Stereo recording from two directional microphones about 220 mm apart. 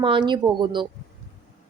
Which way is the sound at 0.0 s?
20° right (ahead or behind).